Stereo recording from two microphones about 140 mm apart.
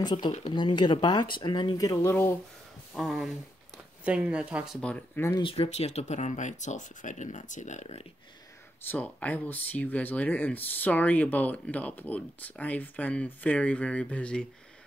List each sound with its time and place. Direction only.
0.0 s speech: 30° left (ahead or behind)
2.9 s speech: centre (ahead or behind)
4.8 s speech: 10° left (ahead or behind)
5.4 s speech: 45° left (ahead or behind)
8.8 s speech: 10° left (ahead or behind)